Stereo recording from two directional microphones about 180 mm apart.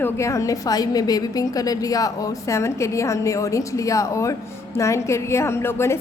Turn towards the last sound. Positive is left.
turn(degrees=15)  # may be behind; listen again after turning